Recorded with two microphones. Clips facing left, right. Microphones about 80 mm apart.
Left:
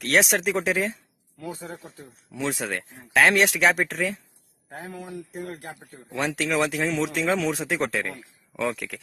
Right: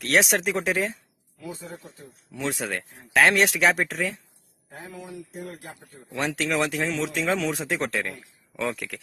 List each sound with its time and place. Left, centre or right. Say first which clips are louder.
0.0 s speech: even; centre
1.4 s speech: left 2 dB; left
2.3 s speech: left 1 dB; centre
4.7 s speech: left 3 dB; left
6.1 s speech: left 1 dB; centre